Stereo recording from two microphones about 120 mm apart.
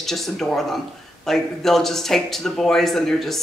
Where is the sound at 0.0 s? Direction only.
Centre (ahead or behind).